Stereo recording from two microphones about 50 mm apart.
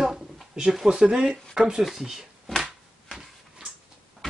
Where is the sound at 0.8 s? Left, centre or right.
Centre.